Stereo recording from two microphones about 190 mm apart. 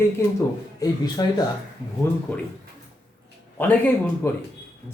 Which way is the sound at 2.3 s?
5° left (ahead or behind).